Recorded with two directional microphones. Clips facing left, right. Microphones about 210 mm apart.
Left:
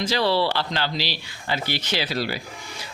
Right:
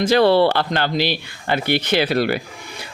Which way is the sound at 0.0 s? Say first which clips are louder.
Right 8 dB; 55° right (ahead or behind).